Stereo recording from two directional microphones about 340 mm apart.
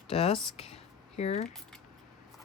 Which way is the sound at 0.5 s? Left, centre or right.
Centre.